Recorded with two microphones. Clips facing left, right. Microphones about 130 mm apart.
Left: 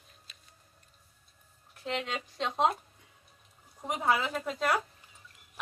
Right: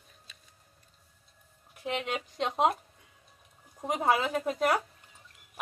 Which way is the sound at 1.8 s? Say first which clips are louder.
Right 2 dB; 10° right (ahead or behind).